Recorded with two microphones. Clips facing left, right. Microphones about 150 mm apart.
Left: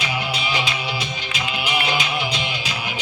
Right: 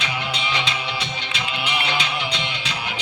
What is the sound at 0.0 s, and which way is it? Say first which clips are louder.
Music: left 2 dB; 10° left (ahead or behind).